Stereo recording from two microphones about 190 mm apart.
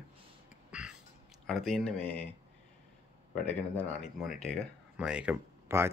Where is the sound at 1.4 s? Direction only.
Centre (ahead or behind).